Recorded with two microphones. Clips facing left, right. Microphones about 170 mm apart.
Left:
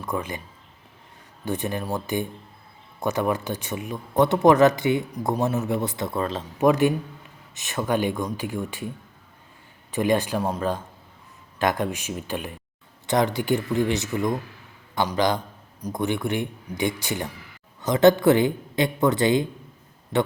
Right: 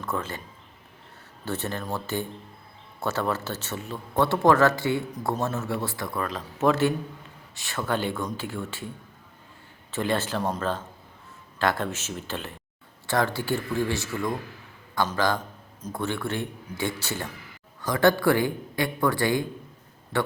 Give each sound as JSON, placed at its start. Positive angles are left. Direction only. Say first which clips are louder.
{"t": 0.0, "sound": "a man's voice", "louder": "left 2 dB", "side_deg": 15}
{"t": 1.5, "sound": "speech", "louder": "left 3 dB", "side_deg": 15}
{"t": 6.6, "sound": "speech", "louder": "left 3 dB", "side_deg": 15}
{"t": 9.9, "sound": "speech", "louder": "left 4 dB", "side_deg": 15}